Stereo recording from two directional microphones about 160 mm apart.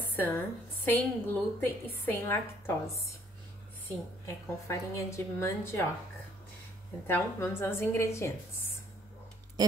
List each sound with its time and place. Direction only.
0.1 s a sound: 10° left (ahead or behind)
0.8 s a woman's voice: 10° left (ahead or behind)
4.6 s a woman's voice: 15° left (ahead or behind)
7.1 s a woman's voice: 15° left (ahead or behind)
9.6 s tick-tock: 25° right (ahead or behind)